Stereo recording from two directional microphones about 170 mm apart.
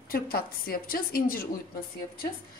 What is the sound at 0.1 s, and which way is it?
A woman's voice, 60° left (ahead or behind).